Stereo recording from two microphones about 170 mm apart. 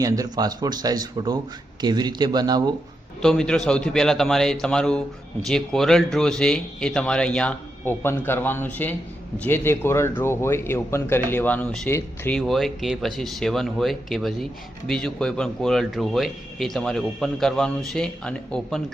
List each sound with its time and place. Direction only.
0.0 s speech: 20° right (ahead or behind)
3.2 s speech: 5° left (ahead or behind)
12.4 s speech: centre (ahead or behind)